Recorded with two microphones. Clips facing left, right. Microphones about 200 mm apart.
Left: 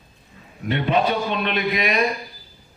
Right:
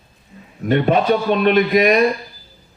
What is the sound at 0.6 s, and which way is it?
A man's voice, 50° right (ahead or behind).